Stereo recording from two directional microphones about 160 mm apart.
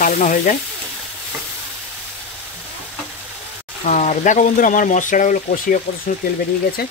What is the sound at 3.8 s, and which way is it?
Speech, 45° left (ahead or behind).